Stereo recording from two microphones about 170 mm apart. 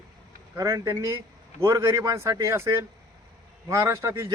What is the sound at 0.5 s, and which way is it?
A man's voice, 20° right (ahead or behind).